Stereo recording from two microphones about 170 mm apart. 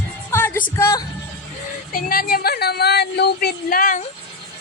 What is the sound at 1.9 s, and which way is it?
Speech, 60° left (ahead or behind).